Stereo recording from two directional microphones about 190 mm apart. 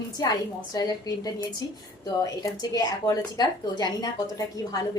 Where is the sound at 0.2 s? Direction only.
20° left (ahead or behind).